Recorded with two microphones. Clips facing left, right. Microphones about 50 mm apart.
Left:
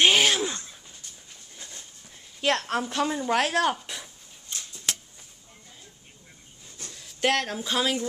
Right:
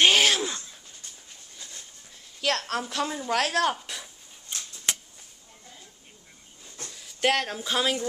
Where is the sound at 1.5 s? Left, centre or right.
Centre.